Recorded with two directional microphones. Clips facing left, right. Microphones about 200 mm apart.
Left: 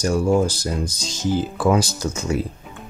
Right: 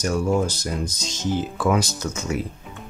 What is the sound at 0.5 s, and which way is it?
Speech, 30° left (ahead or behind).